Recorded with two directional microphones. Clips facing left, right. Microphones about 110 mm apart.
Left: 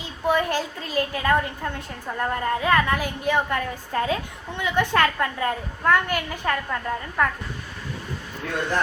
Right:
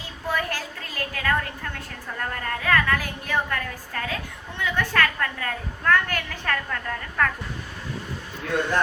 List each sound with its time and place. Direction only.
0.3 s a woman's voice: 20° left (ahead or behind)